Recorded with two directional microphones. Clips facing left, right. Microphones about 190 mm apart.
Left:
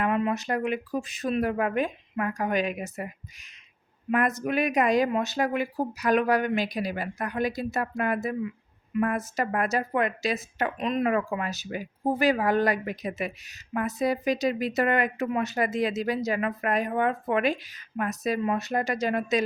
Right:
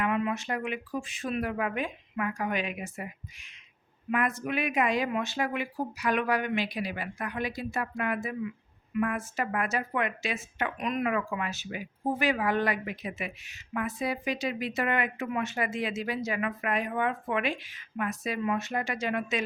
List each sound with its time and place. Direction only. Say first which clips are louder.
0.0 s a woman's voice: left 3 dB; 35° left (ahead or behind)
4.1 s a woman's voice: left 4 dB; 40° left (ahead or behind)